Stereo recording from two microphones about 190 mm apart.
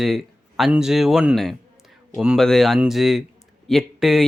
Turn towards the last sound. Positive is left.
turn(degrees=0)  # may be behind; listen again after turning